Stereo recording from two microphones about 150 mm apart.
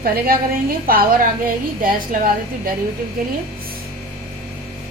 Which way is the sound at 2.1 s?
65° right (ahead or behind).